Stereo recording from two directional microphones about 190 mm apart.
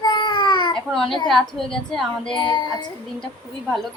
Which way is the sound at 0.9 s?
Centre (ahead or behind).